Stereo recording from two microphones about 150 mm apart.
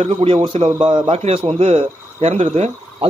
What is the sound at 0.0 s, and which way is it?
A man's voice, 40° right (ahead or behind).